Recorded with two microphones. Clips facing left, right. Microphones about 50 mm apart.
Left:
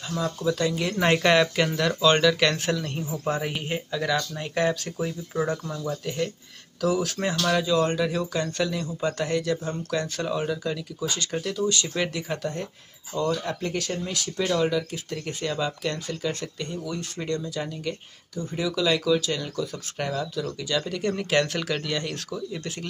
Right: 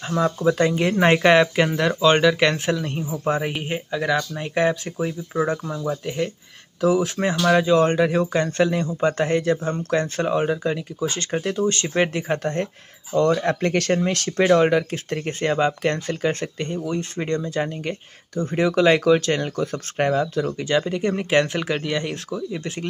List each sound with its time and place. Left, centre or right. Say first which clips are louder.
0.1 s speech: right 6 dB; right
7.6 s speech: right 6 dB; right
13.4 s speech: right 8 dB; right
20.8 s speech: right 4 dB; right